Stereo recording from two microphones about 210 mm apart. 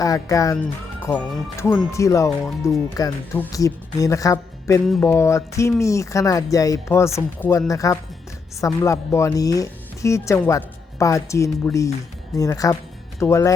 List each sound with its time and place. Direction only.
0.0 s speech: 15° left (ahead or behind)